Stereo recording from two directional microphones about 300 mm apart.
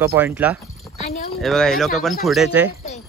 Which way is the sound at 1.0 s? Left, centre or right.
Left.